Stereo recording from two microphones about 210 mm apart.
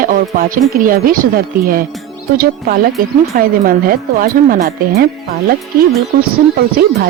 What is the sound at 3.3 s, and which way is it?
Speech, 45° right (ahead or behind).